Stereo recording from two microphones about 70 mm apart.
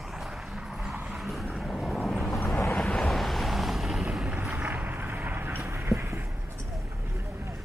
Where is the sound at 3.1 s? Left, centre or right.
Centre.